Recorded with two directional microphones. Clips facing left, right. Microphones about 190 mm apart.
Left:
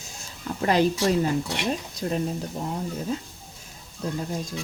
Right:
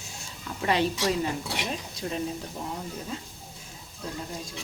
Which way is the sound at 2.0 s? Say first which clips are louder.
Left 5 dB; 45° left (ahead or behind).